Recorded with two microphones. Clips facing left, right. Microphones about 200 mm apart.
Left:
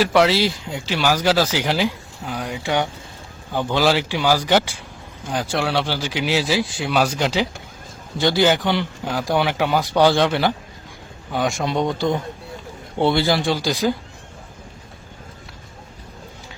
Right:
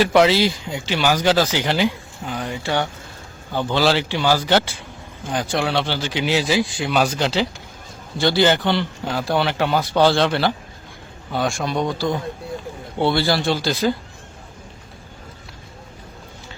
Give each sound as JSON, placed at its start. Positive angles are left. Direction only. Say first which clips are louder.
{"t": 0.0, "sound": "a man's voice", "louder": "right 1 dB", "side_deg": 0}